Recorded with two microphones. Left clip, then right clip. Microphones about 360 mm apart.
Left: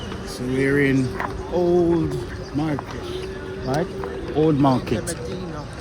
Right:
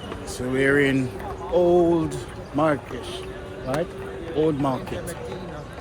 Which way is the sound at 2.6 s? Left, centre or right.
Centre.